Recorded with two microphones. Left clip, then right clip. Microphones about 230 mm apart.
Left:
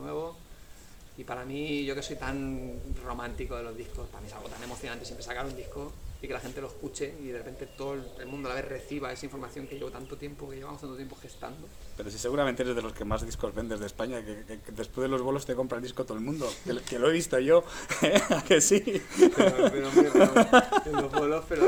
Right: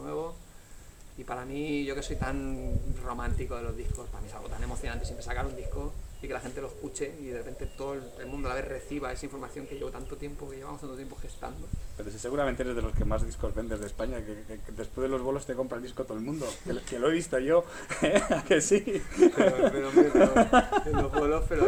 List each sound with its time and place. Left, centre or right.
0.0 s a sound: centre
1.3 s speech: centre
11.9 s speech: left
21.2 s speech: centre